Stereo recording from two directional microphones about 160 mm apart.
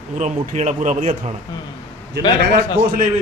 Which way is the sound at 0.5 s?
45° right (ahead or behind).